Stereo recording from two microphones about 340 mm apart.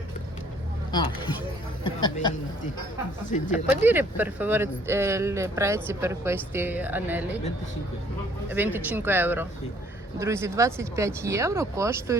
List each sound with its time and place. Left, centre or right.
0.9 s speech: centre
3.3 s speech: centre
3.8 s speech: centre
8.4 s speech: centre